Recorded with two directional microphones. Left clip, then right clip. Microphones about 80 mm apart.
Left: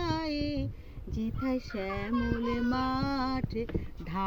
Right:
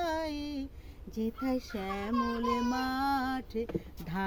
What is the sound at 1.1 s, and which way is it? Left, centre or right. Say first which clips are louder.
Music: even; right.